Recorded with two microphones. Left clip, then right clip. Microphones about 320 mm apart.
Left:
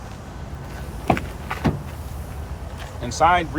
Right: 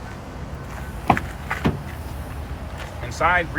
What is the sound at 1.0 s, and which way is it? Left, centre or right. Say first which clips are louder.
Vehicle: right 2 dB; centre.